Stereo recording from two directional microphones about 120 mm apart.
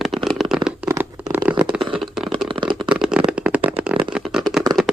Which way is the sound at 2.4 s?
45° right (ahead or behind).